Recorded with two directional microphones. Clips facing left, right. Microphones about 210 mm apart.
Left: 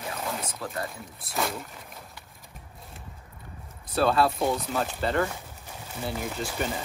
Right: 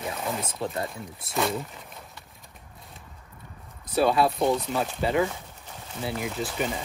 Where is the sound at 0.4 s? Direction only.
25° right (ahead or behind).